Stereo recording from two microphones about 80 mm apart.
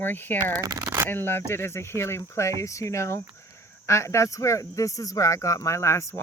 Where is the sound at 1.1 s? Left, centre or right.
Left.